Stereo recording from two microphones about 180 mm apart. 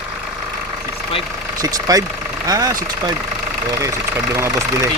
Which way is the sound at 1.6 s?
20° right (ahead or behind).